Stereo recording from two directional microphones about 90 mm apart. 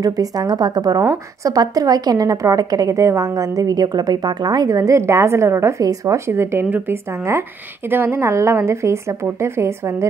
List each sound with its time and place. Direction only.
0.0 s a woman's voice: 45° right (ahead or behind); by 10.0 s 30° right (ahead or behind)